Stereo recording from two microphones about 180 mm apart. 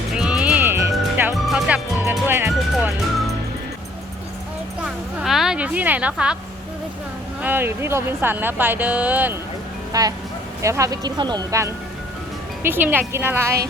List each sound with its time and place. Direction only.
0.1 s music: 5° right (ahead or behind)
1.5 s music: 5° right (ahead or behind)
4.8 s music: centre (ahead or behind)
7.4 s speech: 10° right (ahead or behind)
9.9 s speech: 20° right (ahead or behind)